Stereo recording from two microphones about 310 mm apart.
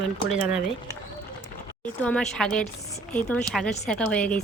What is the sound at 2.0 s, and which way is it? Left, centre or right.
Cutlery, centre.